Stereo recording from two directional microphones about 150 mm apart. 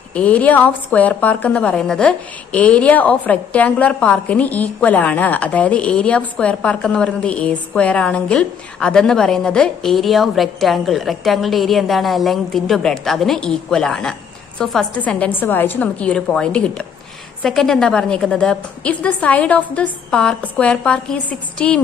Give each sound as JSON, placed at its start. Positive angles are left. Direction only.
{"t": 0.1, "sound": "a woman's voice", "side_deg": 10}